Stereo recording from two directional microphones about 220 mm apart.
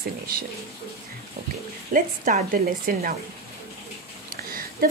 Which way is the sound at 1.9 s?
35° right (ahead or behind).